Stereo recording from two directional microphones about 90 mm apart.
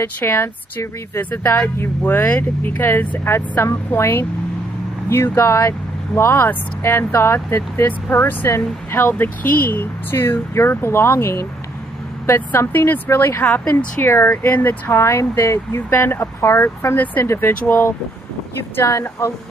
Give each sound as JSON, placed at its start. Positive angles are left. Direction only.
{"t": 0.0, "sound": "speech", "side_deg": 25}